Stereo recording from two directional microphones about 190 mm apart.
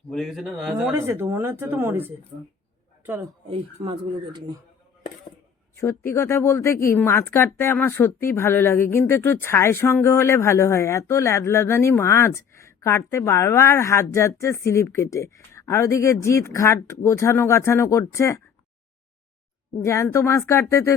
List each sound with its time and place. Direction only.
0.1 s speech: centre (ahead or behind)
0.9 s speech: 10° right (ahead or behind)
3.8 s speech: 25° right (ahead or behind)
5.7 s speech: 15° left (ahead or behind)
19.8 s speech: 15° left (ahead or behind)